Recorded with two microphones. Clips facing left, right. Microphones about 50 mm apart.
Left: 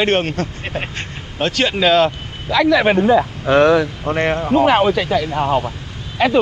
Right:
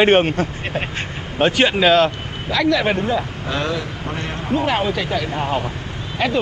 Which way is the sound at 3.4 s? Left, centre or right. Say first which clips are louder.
Left 11 dB; left.